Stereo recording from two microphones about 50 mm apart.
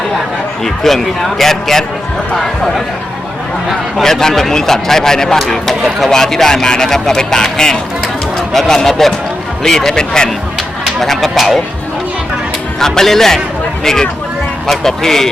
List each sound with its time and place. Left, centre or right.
0.6 s speech: centre
4.0 s speech: centre
11.0 s speech: centre
12.8 s speech: centre